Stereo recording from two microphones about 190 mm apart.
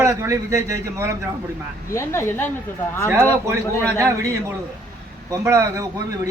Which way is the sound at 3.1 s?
15° right (ahead or behind).